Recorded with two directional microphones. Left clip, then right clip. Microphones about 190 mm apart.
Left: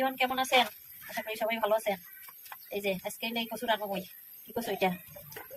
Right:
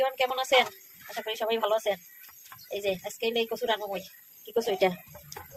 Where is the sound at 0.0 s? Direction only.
30° right (ahead or behind).